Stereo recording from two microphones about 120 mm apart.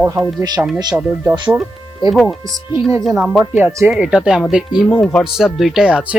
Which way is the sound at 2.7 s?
25° right (ahead or behind).